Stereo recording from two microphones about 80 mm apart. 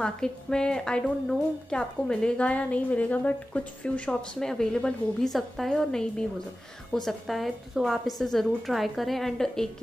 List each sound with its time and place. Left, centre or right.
0.0 s a woman's voice: centre